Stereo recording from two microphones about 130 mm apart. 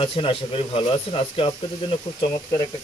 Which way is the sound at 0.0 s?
45° left (ahead or behind).